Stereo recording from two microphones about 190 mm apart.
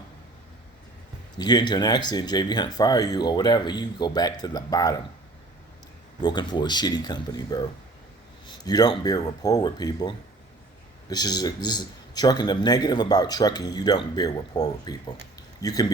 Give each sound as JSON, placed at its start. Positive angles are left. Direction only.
{"t": 1.4, "sound": "speech", "side_deg": 20}
{"t": 6.2, "sound": "speech", "side_deg": 25}